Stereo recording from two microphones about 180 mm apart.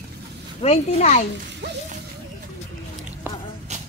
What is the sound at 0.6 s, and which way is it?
Speech, 35° left (ahead or behind).